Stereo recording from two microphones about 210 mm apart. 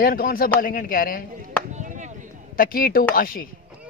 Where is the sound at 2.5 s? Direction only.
45° left (ahead or behind).